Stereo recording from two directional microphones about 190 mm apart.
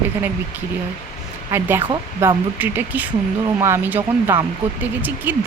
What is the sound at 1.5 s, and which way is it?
Speech, 10° right (ahead or behind).